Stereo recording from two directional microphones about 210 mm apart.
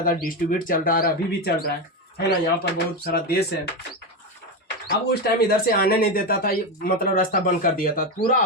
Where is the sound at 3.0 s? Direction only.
45° left (ahead or behind).